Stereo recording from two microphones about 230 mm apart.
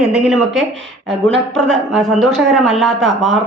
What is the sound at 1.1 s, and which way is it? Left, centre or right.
Speech, right.